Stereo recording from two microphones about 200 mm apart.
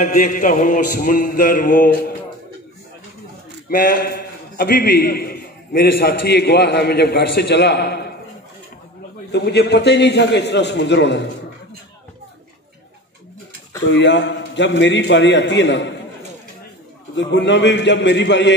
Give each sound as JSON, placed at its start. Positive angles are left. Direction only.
{"t": 0.0, "sound": "a sound", "side_deg": 40}
{"t": 3.6, "sound": "a man's voice", "side_deg": 45}
{"t": 9.3, "sound": "a man's voice", "side_deg": 55}
{"t": 13.8, "sound": "a man's voice", "side_deg": 60}
{"t": 17.1, "sound": "a man's voice", "side_deg": 60}